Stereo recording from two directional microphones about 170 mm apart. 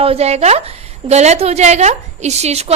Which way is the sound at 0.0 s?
35° right (ahead or behind).